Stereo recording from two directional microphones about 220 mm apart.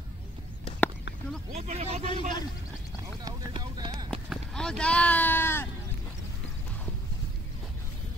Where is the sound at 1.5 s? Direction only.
30° right (ahead or behind).